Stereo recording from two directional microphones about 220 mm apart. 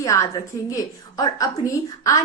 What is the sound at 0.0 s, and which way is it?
A woman's voice, 15° left (ahead or behind).